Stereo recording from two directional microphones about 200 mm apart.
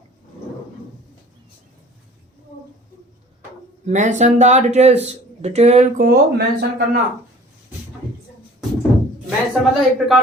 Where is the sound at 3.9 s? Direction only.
35° right (ahead or behind).